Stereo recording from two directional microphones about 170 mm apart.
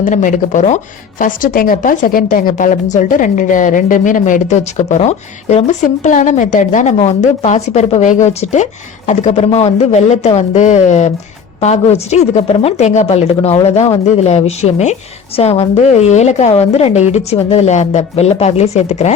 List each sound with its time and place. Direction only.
0.0 s a woman's voice: 50° left (ahead or behind)